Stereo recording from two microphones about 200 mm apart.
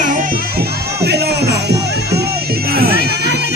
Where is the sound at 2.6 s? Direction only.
50° right (ahead or behind).